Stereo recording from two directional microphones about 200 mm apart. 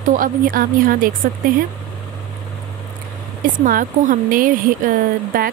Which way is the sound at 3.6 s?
40° right (ahead or behind).